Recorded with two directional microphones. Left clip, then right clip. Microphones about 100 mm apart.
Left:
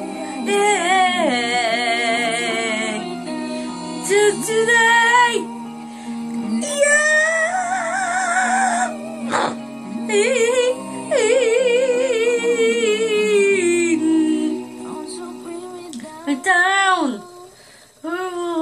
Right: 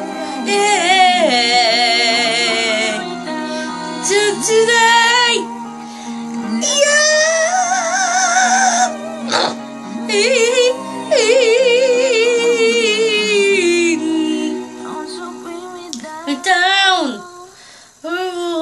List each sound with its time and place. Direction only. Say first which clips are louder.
0.0 s music: right 5 dB; 25° left (ahead or behind)
0.4 s music: right 3 dB; 20° right (ahead or behind)
3.0 s music: right 4 dB; 25° left (ahead or behind)
4.1 s music: right 2 dB; 20° right (ahead or behind)
6.3 s music: right 2 dB; 20° left (ahead or behind)
6.6 s music: right 3 dB; 30° right (ahead or behind)
10.0 s music: right 3 dB; 25° right (ahead or behind)
16.3 s female singing: right 2 dB; 15° right (ahead or behind)
18.1 s a sound: right 4 dB; 20° right (ahead or behind)